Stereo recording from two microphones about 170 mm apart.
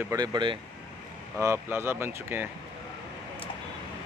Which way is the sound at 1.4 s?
15° right (ahead or behind).